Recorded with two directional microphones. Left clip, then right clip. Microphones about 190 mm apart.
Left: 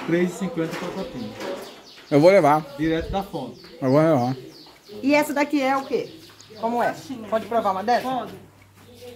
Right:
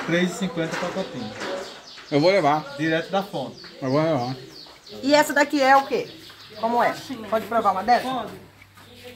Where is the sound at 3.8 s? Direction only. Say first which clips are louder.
Left 4 dB; 55° left (ahead or behind).